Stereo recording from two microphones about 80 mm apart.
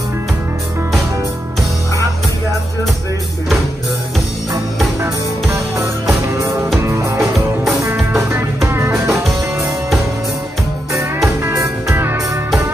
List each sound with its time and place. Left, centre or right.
5.0 s music: right
7.2 s music: centre
8.1 s music: right
9.6 s music: centre
11.4 s music: right